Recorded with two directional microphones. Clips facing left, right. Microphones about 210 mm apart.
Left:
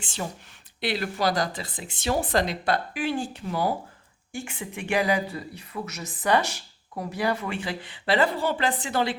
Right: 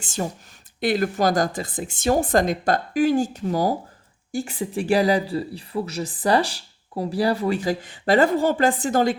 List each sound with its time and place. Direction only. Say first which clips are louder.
0.0 s speech: right 6 dB; 45° right (ahead or behind)